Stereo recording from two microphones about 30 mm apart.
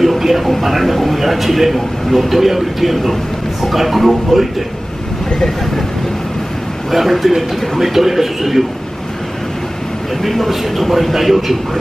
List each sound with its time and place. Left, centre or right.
0.0 s a sound: centre
0.5 s speech: centre
6.9 s speech: centre
10.2 s speech: centre